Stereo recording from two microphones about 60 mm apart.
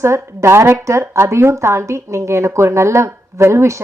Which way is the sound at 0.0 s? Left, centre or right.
Right.